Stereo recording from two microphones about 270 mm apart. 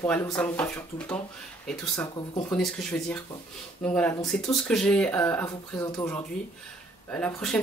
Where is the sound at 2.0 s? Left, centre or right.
Centre.